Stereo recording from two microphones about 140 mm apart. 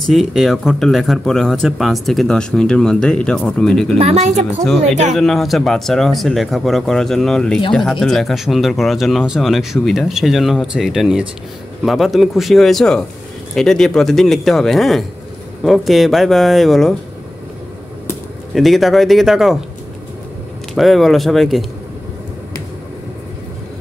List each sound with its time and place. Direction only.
0.0 s speech: centre (ahead or behind)
4.0 s speech: 55° right (ahead or behind)
5.1 s speech: centre (ahead or behind)
18.5 s speech: centre (ahead or behind)
20.7 s speech: centre (ahead or behind)